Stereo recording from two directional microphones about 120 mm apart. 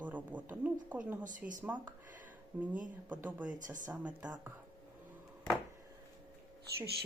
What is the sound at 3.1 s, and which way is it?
Speech, 10° right (ahead or behind).